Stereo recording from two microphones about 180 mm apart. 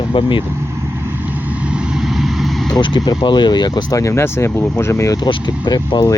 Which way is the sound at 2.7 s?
25° left (ahead or behind).